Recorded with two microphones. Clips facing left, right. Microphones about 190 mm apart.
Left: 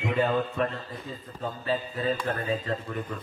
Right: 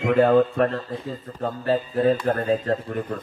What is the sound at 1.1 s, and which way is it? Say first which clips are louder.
Speech: right 4 dB; 45° right (ahead or behind).